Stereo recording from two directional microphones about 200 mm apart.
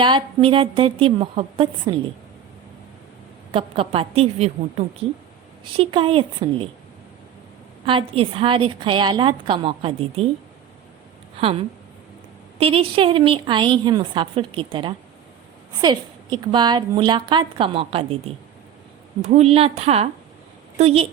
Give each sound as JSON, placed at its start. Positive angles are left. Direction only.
{"t": 0.0, "sound": "a woman's voice", "side_deg": -25}
{"t": 3.5, "sound": "a woman's voice", "side_deg": -30}
{"t": 5.7, "sound": "a woman's voice", "side_deg": -25}
{"t": 7.9, "sound": "a woman's voice", "side_deg": -25}
{"t": 12.5, "sound": "a woman's voice", "side_deg": -30}
{"t": 19.2, "sound": "a woman's voice", "side_deg": -35}